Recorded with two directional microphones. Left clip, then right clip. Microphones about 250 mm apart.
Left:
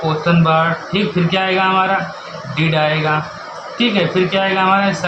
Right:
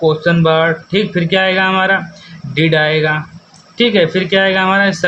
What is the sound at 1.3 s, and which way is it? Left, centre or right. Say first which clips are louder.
Speech: right 3 dB; right.